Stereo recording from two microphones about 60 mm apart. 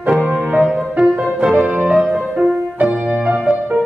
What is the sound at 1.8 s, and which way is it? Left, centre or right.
Music, right.